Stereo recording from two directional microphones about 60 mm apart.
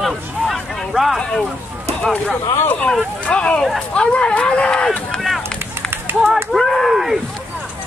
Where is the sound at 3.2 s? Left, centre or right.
Centre.